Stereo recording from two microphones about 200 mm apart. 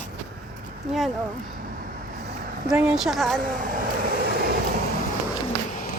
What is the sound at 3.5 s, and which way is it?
Vehicle, 45° right (ahead or behind).